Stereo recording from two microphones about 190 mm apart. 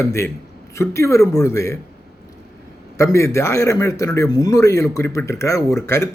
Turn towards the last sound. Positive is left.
turn(degrees=15)  # may be behind; listen again after turning